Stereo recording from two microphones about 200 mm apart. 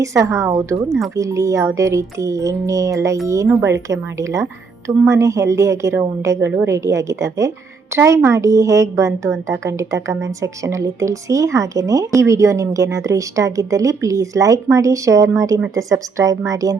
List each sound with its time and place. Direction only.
0.0 s a woman's voice: 15° right (ahead or behind)